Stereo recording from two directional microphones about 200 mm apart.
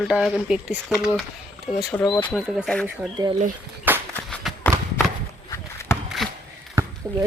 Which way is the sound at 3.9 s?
10° right (ahead or behind).